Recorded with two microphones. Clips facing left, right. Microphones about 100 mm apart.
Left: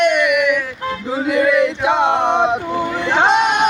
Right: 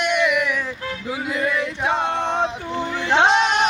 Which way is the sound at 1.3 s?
80° left.